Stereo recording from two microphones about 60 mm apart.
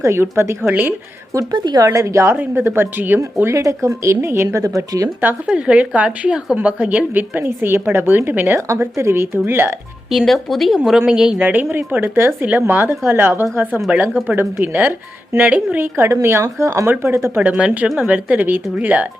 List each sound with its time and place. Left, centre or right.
0.0 s speech: right
0.7 s a woman's voice: right
1.3 s speech: right
2.3 s speech: right
3.3 s speech: right
5.5 s a woman's voice: centre
8.5 s speech: right
8.8 s speech: right
10.1 s speech: centre
11.1 s speech: centre
11.3 s a woman's voice: right
16.0 s speech: right
16.8 s speech: right
17.3 s a woman's voice: right